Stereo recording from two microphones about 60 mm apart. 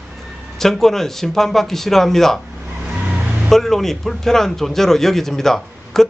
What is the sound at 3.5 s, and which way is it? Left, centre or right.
Speech, centre.